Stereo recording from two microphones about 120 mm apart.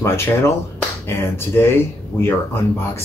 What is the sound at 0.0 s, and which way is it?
Speech, 20° left (ahead or behind).